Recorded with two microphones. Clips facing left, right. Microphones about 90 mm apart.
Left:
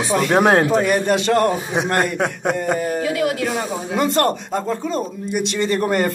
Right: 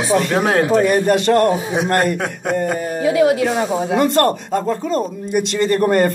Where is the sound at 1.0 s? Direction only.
Centre (ahead or behind).